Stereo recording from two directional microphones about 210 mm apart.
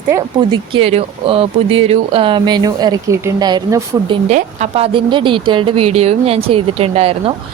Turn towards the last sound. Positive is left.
turn(degrees=-25)  # may be behind; listen again after turning